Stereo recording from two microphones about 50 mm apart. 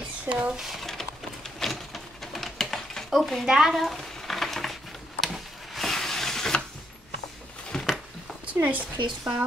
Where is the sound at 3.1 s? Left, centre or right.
Centre.